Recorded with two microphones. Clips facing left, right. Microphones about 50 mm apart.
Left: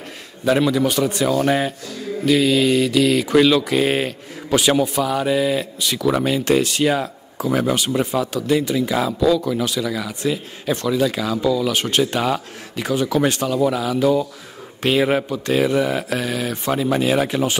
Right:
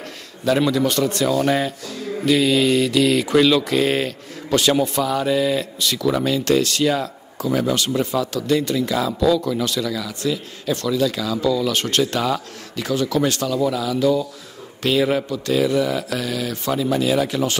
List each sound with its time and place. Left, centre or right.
0.6 s speech: centre
2.2 s speech: centre
9.9 s speech: left